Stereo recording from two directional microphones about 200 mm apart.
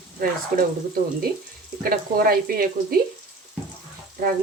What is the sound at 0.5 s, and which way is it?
Speech, 45° right (ahead or behind).